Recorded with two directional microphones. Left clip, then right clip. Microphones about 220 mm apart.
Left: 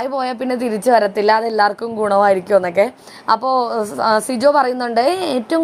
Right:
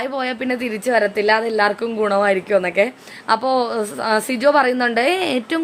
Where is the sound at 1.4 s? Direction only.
5° right (ahead or behind).